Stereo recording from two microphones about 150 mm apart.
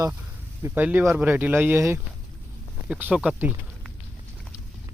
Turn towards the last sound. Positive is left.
turn(degrees=-10)  # may be behind; listen again after turning